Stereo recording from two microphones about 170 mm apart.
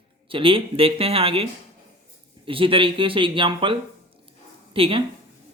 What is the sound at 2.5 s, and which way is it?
Speech, 30° right (ahead or behind).